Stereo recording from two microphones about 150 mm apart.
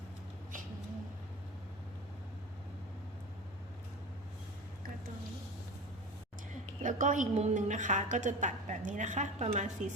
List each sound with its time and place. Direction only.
6.8 s a woman's voice: 55° right (ahead or behind)